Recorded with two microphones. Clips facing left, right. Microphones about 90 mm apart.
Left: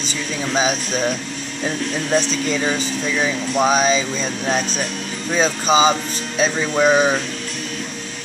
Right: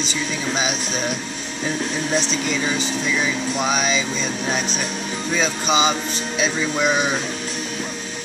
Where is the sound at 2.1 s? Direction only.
35° left (ahead or behind).